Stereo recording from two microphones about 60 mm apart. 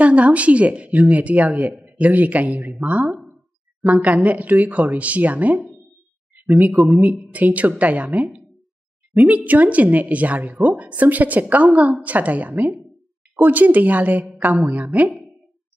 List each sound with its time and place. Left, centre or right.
0.0 s a woman's voice: right
6.3 s a sound: right
6.9 s a woman's voice: right